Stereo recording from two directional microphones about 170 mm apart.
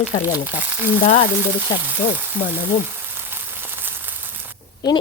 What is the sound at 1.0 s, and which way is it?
Frying, 45° left (ahead or behind).